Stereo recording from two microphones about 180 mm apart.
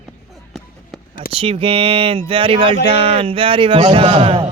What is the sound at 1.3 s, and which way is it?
A man's voice, 30° right (ahead or behind).